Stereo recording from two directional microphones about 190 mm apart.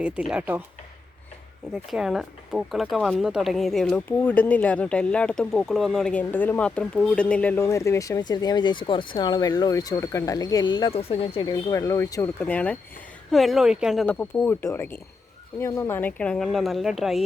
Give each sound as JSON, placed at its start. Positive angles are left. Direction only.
{"t": 0.0, "sound": "speech", "side_deg": -5}
{"t": 1.7, "sound": "speech", "side_deg": 0}